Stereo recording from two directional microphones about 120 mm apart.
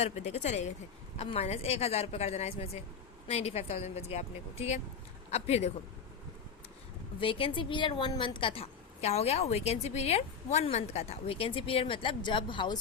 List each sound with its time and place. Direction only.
0.0 s speech: 70° left (ahead or behind)
1.2 s a woman's voice: 60° left (ahead or behind)
7.2 s a woman's voice: 45° left (ahead or behind)